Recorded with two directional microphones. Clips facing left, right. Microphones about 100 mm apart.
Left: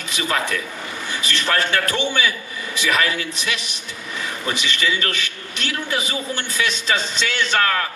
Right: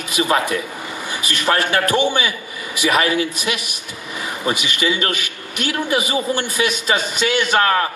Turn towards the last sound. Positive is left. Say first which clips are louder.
# right 4 dB
turn(degrees=-25)  # may be behind; listen again after turning